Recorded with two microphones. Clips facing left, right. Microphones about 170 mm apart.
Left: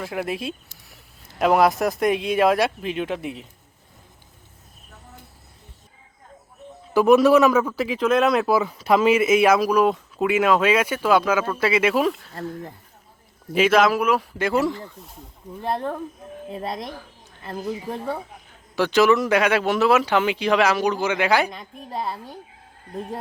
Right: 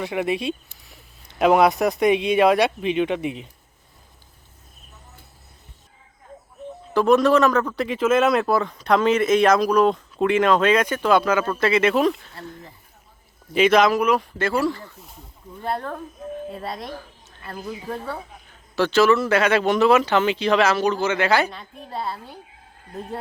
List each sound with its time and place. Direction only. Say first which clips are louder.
0.0 s speech: right 4 dB; centre (ahead or behind)
6.9 s speech: left 2 dB; 10° left (ahead or behind)
13.5 s speech: right 1 dB; 5° left (ahead or behind); by 16.0 s 20° left (ahead or behind)
17.4 s speech: left 3 dB; 15° left (ahead or behind)